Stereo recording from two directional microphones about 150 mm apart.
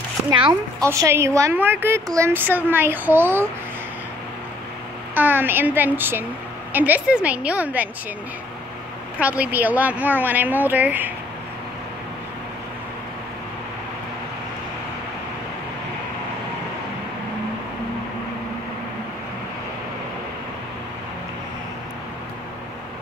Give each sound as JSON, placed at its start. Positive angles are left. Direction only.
{"t": 0.3, "sound": "a woman's voice", "side_deg": -30}
{"t": 0.8, "sound": "a woman's voice", "side_deg": -20}
{"t": 5.1, "sound": "a woman's voice", "side_deg": -15}
{"t": 9.2, "sound": "a woman's voice", "side_deg": -10}